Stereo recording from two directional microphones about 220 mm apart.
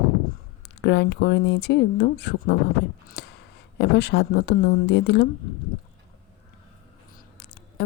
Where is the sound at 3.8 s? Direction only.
50° left (ahead or behind).